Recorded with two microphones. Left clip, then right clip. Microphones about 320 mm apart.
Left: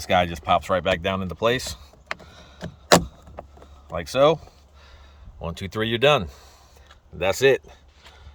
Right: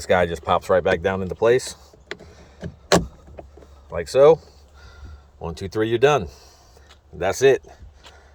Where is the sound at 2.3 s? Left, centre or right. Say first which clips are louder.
Even; centre.